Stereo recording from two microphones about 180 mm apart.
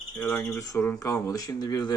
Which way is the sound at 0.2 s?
10° left (ahead or behind).